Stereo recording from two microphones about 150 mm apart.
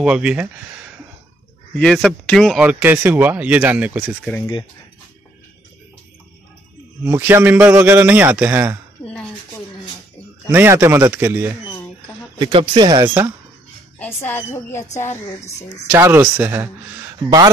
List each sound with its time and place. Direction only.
0.0 s speech: 5° right (ahead or behind)
1.8 s speech: centre (ahead or behind)
7.1 s speech: 15° right (ahead or behind)
9.0 s a sound: 5° left (ahead or behind)
10.5 s speech: 15° right (ahead or behind)
12.4 s speech: 30° right (ahead or behind)
13.9 s speech: 15° left (ahead or behind)
15.9 s speech: 15° right (ahead or behind)